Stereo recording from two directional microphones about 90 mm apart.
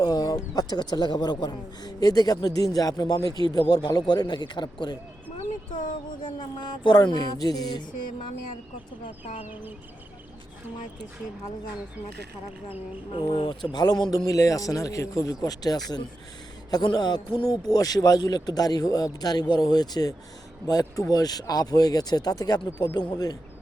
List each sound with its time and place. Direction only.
0.0 s a man's voice: 45° left (ahead or behind)
6.2 s a man's voice: 60° left (ahead or behind)
13.3 s speech: 75° left (ahead or behind)
13.7 s a man's voice: 50° left (ahead or behind)
17.7 s a man's voice: 45° left (ahead or behind)